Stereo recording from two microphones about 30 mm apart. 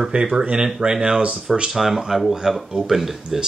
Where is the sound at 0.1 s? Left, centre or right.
Right.